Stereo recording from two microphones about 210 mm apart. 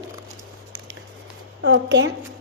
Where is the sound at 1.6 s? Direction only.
55° right (ahead or behind).